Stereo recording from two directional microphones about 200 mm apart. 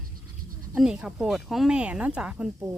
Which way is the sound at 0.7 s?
5° right (ahead or behind).